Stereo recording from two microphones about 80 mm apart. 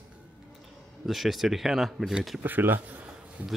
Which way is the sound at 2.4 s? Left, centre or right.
Right.